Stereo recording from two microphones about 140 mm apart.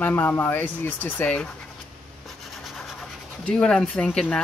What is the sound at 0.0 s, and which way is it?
Speech, 15° left (ahead or behind).